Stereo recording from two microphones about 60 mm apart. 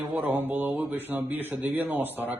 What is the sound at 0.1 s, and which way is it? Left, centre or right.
Speech, right.